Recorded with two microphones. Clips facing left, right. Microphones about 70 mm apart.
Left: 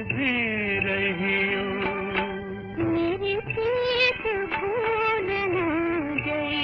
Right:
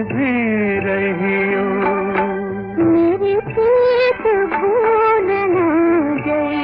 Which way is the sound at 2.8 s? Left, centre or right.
Right.